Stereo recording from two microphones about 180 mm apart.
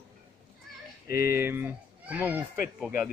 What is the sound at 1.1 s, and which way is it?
Speech, 55° left (ahead or behind).